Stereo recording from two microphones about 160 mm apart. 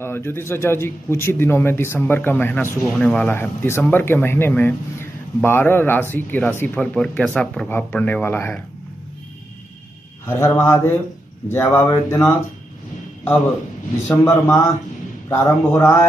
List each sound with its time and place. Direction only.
0.0 s a man's voice: 15° left (ahead or behind)
10.2 s a man's voice: 15° left (ahead or behind)
14.0 s a man's voice: 20° left (ahead or behind)